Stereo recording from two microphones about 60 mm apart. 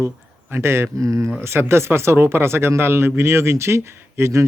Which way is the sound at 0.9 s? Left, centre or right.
Right.